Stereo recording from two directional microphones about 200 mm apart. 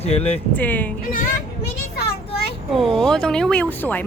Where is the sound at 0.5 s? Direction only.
10° left (ahead or behind).